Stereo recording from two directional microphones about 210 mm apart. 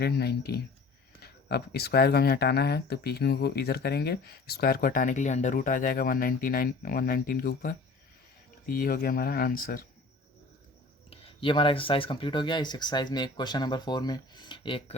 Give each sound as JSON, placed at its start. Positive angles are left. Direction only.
{"t": 0.0, "sound": "speech", "side_deg": 50}
{"t": 11.1, "sound": "speech", "side_deg": 25}